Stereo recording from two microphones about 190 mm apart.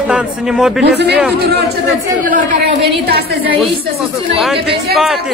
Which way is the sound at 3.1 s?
55° right (ahead or behind).